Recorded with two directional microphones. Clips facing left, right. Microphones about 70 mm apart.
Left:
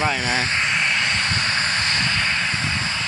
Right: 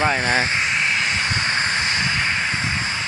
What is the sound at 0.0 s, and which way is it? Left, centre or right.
Speech, right.